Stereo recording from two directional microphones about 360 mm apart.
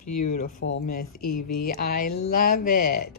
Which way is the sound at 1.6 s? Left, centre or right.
Left.